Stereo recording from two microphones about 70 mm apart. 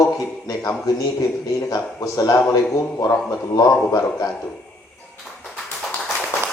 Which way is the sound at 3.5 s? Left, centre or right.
Left.